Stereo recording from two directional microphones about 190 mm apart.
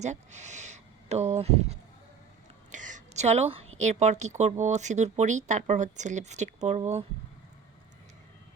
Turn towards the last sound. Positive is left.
turn(degrees=-35)  # may be behind; listen again after turning